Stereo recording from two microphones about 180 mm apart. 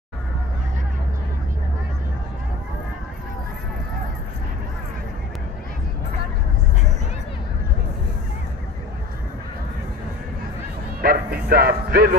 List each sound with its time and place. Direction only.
11.0 s music: 55° right (ahead or behind)